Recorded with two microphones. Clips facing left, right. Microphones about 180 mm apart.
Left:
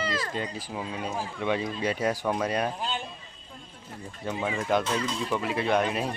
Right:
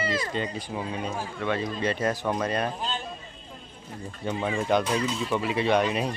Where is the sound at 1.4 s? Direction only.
15° left (ahead or behind).